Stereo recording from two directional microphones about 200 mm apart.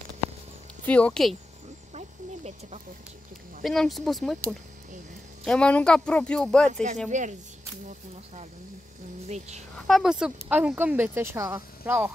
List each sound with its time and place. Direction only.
0.8 s speech: 5° left (ahead or behind)
2.0 s snake: 35° right (ahead or behind)
3.6 s speech: centre (ahead or behind)
5.4 s speech: 5° left (ahead or behind)
6.7 s speech: 35° right (ahead or behind)
9.8 s speech: centre (ahead or behind)